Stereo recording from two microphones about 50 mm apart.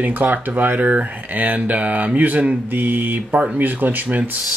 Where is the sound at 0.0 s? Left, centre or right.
Right.